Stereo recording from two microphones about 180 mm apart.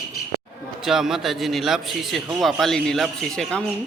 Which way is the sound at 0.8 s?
Centre (ahead or behind).